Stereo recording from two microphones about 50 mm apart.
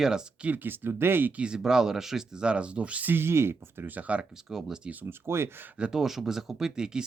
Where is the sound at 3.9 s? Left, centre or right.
Right.